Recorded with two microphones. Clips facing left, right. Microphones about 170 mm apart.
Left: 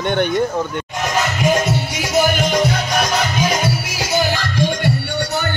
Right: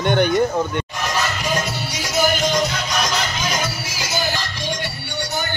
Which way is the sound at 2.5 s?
55° left (ahead or behind).